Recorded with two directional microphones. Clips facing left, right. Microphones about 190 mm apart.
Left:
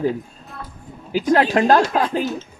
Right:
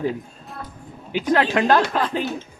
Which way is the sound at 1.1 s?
40° left (ahead or behind).